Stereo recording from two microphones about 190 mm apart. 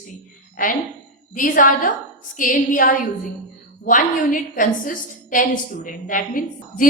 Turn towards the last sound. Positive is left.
turn(degrees=45)  # may be behind; listen again after turning